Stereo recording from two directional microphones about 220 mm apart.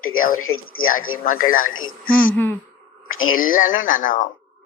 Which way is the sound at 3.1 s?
65° left (ahead or behind).